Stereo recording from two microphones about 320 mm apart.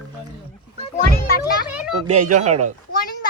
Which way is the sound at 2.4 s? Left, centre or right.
Right.